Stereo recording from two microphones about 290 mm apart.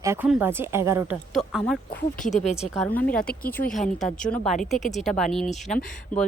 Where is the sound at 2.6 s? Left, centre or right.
Centre.